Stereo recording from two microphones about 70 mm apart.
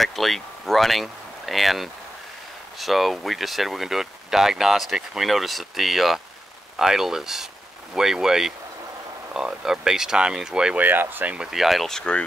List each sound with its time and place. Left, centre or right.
0.0 s speech: centre
10.8 s speech: right
11.5 s speech: centre
12.0 s speech: centre